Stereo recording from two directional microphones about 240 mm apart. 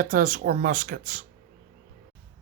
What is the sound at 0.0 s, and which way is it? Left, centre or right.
Speech, right.